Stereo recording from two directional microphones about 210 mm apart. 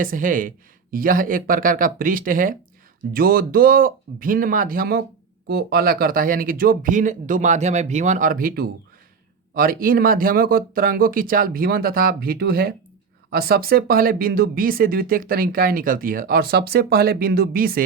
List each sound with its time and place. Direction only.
0.0 s speech: 40° right (ahead or behind)